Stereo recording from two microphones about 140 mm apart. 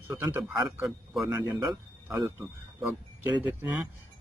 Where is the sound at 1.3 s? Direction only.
20° right (ahead or behind).